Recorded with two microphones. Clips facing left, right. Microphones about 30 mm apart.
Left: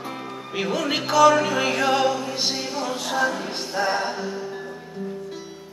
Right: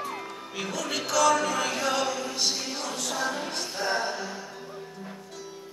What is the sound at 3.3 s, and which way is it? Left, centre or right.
Music, left.